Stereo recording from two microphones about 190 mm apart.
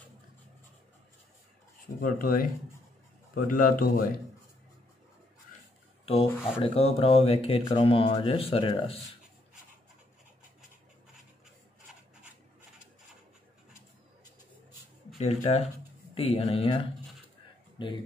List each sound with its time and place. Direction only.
2.0 s speech: 50° left (ahead or behind)
3.4 s speech: 45° left (ahead or behind)
6.0 s speech: 30° left (ahead or behind)
15.1 s speech: 35° left (ahead or behind)